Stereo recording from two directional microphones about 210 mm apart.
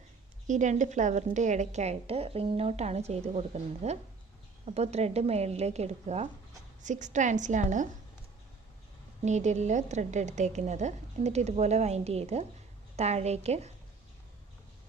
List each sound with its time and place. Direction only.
0.4 s a woman's voice: 35° right (ahead or behind)
9.2 s a woman's voice: 35° right (ahead or behind)